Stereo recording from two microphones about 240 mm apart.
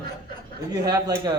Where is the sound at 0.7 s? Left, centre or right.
Centre.